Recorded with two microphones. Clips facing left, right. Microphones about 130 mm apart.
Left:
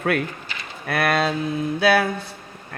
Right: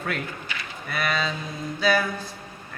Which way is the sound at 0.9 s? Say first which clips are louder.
Left 6 dB; 65° left (ahead or behind).